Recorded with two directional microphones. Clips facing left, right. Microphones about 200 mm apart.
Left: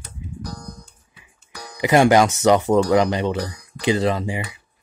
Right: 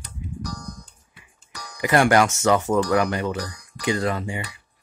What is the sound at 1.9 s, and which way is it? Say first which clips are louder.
Speech: left 3 dB; 15° left (ahead or behind).